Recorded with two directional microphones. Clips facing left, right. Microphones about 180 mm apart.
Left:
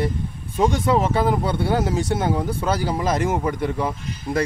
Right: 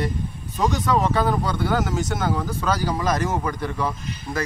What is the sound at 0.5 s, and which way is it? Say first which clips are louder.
Speech: left 3 dB; 30° left (ahead or behind).